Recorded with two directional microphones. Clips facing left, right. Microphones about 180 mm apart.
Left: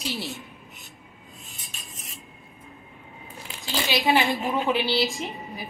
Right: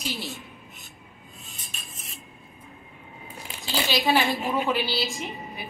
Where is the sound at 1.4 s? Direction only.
Centre (ahead or behind).